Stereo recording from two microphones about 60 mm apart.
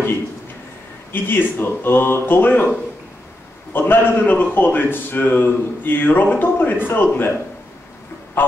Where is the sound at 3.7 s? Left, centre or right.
Left.